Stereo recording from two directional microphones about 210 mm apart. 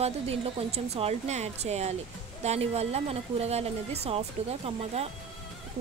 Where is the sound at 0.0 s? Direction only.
30° right (ahead or behind).